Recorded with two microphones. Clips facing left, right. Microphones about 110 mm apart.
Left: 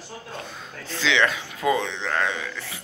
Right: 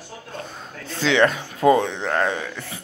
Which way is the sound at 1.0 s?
45° right (ahead or behind).